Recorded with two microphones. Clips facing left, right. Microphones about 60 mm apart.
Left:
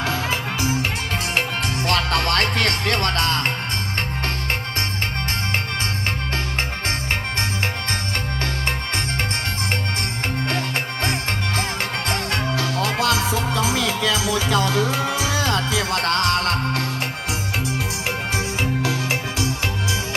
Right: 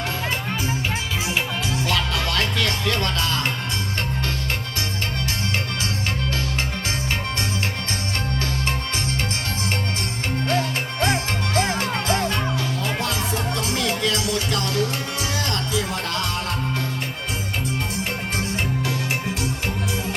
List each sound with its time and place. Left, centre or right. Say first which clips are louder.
1.9 s music: left 6 dB; left
11.8 s music: right 2 dB; left
12.5 s music: left 3 dB; left
15.9 s music: left 6 dB; left